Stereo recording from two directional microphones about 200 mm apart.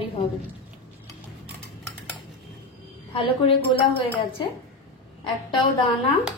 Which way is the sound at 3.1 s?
25° left (ahead or behind).